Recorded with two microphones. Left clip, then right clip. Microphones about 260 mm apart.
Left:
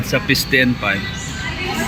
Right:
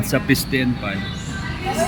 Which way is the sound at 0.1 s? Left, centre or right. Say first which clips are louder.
Left 4 dB; centre.